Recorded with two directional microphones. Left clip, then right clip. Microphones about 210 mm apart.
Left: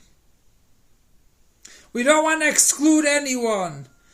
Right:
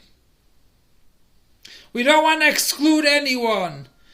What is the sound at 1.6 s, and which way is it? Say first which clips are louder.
Speech: right 1 dB; 15° left (ahead or behind).